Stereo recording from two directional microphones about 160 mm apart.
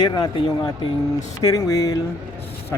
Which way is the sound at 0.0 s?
25° left (ahead or behind).